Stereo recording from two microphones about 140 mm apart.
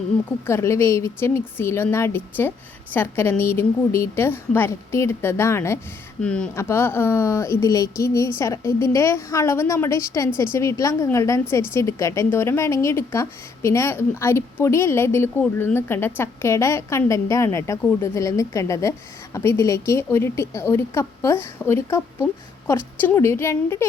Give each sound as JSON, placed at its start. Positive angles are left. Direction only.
{"t": 0.4, "sound": "a woman's voice", "side_deg": 20}
{"t": 6.2, "sound": "a woman's voice", "side_deg": 5}
{"t": 6.6, "sound": "a woman's voice", "side_deg": 20}